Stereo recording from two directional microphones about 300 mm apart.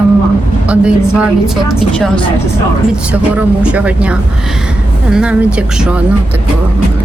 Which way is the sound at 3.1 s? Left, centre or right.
Centre.